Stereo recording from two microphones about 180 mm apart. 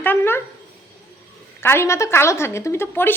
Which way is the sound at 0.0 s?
10° left (ahead or behind).